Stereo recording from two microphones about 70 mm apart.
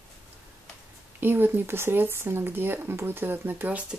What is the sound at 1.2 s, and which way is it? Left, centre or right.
Speech, right.